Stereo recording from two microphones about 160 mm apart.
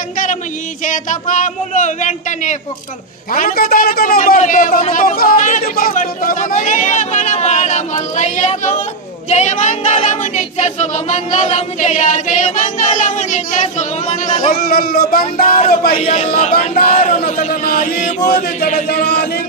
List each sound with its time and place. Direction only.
0.8 s choir: 50° left (ahead or behind)
3.3 s a man's voice: 60° left (ahead or behind)
4.4 s choir: 55° left (ahead or behind)
14.4 s a man's voice: 65° left (ahead or behind)
15.4 s a man's voice: 35° left (ahead or behind)
16.9 s a sound: 40° left (ahead or behind)
17.2 s chant: 65° left (ahead or behind)
18.2 s chant: 80° left